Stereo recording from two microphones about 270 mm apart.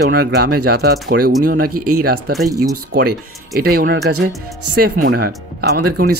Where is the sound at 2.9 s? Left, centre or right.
Right.